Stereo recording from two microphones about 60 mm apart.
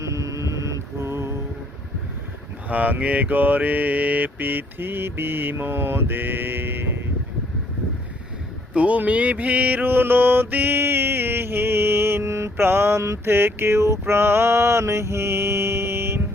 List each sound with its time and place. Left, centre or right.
0.0 s music: right
2.6 s mantra: right
8.7 s mantra: right